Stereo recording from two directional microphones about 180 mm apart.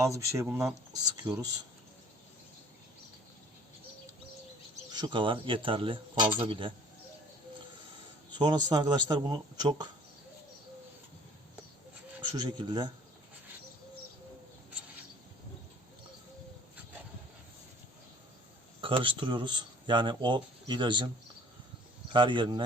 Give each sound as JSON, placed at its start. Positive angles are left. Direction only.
{"t": 0.0, "sound": "speech", "side_deg": -15}
{"t": 4.9, "sound": "speech", "side_deg": -25}
{"t": 8.4, "sound": "speech", "side_deg": -25}
{"t": 12.2, "sound": "speech", "side_deg": -25}
{"t": 18.8, "sound": "speech", "side_deg": -30}
{"t": 22.1, "sound": "speech", "side_deg": -25}